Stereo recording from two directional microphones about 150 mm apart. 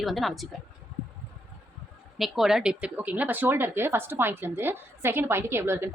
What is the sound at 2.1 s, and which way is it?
Speech, centre (ahead or behind).